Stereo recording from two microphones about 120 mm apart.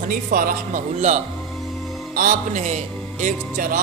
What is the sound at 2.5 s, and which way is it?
Speech, 85° right.